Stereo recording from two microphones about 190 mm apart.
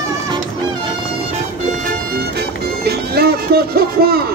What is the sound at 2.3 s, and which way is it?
Music, 55° right (ahead or behind).